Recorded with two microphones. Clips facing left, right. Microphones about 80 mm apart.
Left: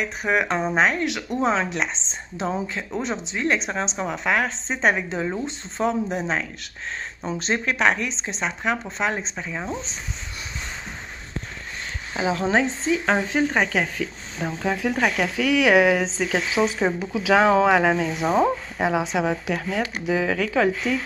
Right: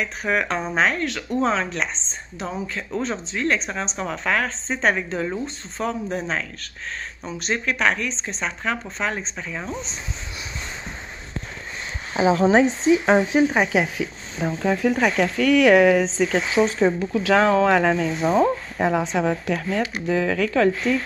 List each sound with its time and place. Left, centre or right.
0.0 s speech: centre
12.1 s speech: right
14.4 s speech: centre